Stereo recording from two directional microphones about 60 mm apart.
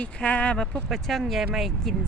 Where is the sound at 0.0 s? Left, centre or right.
Left.